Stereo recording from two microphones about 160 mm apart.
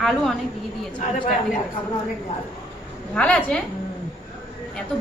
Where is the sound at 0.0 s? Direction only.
Centre (ahead or behind).